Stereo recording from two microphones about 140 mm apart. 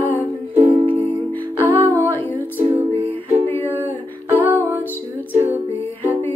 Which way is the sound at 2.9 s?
45° right (ahead or behind).